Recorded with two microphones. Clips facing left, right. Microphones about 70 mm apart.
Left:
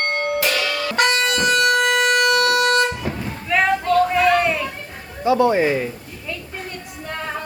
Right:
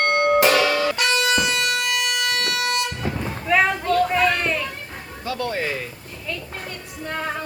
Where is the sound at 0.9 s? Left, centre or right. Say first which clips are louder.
Left 2 dB; left.